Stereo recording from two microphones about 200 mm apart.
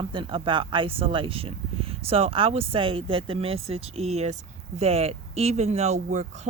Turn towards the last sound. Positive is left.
turn(degrees=-35)  # may be behind; listen again after turning